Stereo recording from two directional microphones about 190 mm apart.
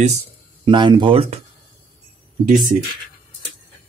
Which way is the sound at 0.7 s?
25° right (ahead or behind).